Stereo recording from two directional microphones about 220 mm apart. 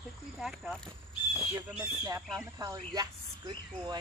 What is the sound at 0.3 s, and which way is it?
Speech, centre (ahead or behind).